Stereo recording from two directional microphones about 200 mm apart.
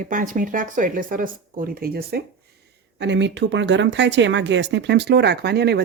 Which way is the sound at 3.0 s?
60° right (ahead or behind).